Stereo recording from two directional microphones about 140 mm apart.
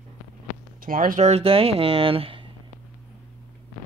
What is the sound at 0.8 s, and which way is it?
Speech, 80° right.